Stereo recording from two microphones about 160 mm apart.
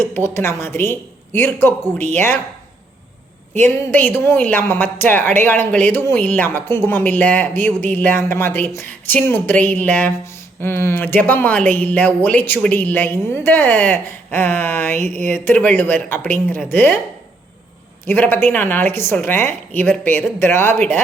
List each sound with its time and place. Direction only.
0.0 s speech: 15° left (ahead or behind)
3.9 s speech: 10° left (ahead or behind)
14.9 s speech: 50° right (ahead or behind)
15.3 s speech: 10° left (ahead or behind)
18.0 s speech: 15° left (ahead or behind)